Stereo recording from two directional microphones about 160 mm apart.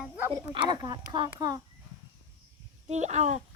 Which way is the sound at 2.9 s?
45° right (ahead or behind).